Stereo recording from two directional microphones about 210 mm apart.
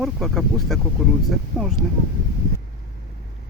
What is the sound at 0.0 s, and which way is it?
Speech, centre (ahead or behind).